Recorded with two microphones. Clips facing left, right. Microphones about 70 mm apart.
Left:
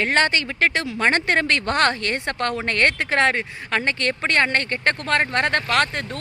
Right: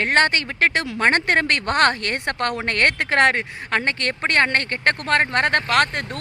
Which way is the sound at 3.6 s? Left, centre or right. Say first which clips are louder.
Even; right.